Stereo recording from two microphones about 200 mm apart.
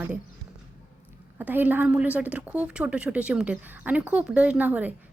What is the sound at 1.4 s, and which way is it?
A woman's voice, 10° right (ahead or behind).